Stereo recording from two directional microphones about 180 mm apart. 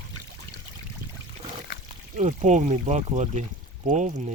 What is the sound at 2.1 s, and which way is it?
Speech, 40° right (ahead or behind).